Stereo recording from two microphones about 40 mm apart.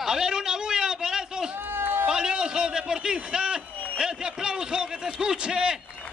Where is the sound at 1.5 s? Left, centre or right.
Right.